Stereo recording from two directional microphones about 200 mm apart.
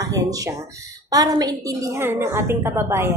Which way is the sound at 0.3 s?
15° right (ahead or behind).